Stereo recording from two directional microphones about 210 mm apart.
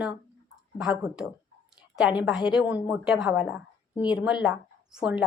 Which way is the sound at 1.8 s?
5° right (ahead or behind).